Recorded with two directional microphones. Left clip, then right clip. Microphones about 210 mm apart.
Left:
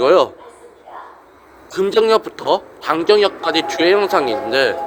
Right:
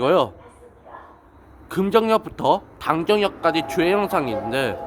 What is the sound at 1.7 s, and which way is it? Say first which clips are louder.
A man's voice: left 4 dB; 5° right (ahead or behind).